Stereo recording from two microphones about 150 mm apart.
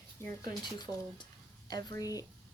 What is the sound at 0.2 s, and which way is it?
Speech, 15° left (ahead or behind).